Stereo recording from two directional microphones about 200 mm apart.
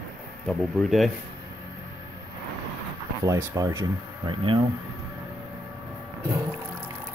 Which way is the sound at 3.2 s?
15° right (ahead or behind).